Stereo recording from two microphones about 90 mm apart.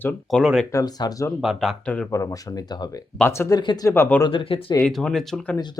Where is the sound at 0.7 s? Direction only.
40° left (ahead or behind).